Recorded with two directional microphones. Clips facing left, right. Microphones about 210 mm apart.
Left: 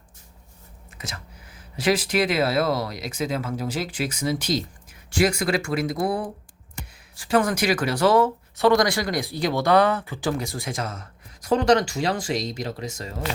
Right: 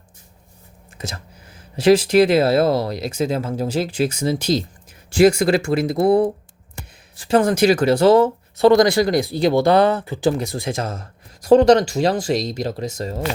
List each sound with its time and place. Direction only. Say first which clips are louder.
0.9 s a sound: right 6 dB; 30° right (ahead or behind)
1.7 s speech: right 9 dB; 25° right (ahead or behind)
7.3 s speech: right 6 dB; 25° right (ahead or behind)